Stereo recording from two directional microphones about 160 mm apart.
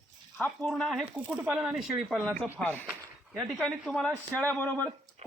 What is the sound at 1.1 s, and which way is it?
Speech, 15° right (ahead or behind).